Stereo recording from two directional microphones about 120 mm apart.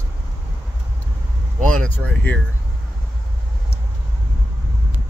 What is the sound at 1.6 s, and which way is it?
Speech, 10° left (ahead or behind).